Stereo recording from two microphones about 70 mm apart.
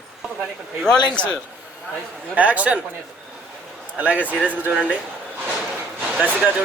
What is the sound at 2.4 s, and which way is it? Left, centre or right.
Speech, right.